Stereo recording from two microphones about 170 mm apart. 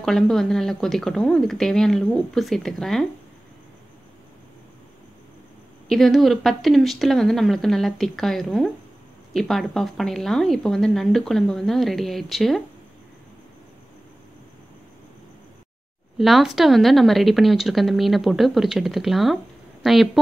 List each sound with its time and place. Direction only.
0.0 s a woman's voice: centre (ahead or behind)
5.9 s a woman's voice: centre (ahead or behind)
16.2 s a woman's voice: centre (ahead or behind)